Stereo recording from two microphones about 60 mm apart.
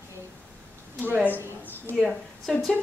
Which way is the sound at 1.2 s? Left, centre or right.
Right.